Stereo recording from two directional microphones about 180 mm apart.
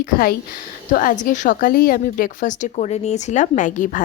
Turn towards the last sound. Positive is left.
turn(degrees=45)  # may be behind; listen again after turning